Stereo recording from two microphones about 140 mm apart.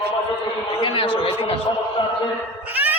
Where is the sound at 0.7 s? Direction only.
40° left (ahead or behind).